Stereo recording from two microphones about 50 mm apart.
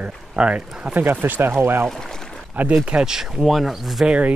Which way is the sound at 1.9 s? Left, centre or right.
Centre.